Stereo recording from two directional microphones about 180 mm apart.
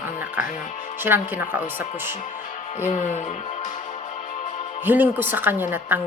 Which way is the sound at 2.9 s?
40° left (ahead or behind).